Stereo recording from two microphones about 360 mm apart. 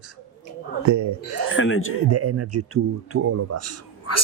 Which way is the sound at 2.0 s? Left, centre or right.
Right.